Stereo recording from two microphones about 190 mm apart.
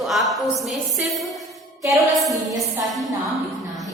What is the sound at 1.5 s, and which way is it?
Music, centre (ahead or behind).